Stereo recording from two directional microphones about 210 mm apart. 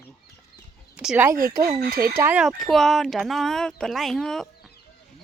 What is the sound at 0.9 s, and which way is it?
Speech, 5° right (ahead or behind).